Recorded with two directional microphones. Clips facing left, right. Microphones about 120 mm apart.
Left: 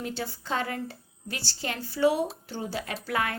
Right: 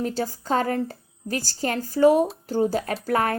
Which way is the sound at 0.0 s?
40° right (ahead or behind).